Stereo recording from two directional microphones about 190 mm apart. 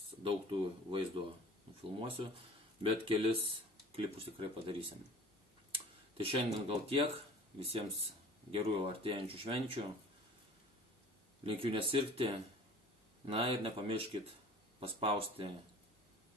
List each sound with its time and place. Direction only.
0.2 s speech: 25° right (ahead or behind)
11.4 s speech: 30° right (ahead or behind)